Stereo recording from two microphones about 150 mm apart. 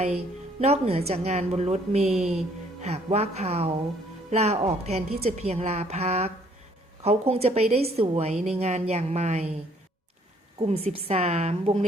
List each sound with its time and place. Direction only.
0.6 s a woman's voice: 45° right (ahead or behind)
2.1 s speech: 5° right (ahead or behind)
2.8 s a woman's voice: 45° right (ahead or behind)
10.9 s a woman's voice: 45° right (ahead or behind)